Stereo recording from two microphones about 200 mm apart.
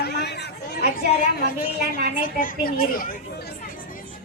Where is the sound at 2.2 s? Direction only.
45° left (ahead or behind).